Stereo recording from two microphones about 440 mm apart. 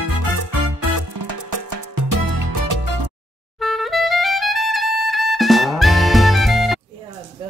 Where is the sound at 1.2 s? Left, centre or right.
Right.